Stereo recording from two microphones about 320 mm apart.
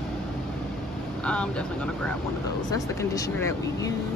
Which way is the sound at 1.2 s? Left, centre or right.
Centre.